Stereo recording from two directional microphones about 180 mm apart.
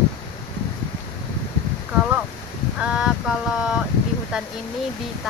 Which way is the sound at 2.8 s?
5° right (ahead or behind).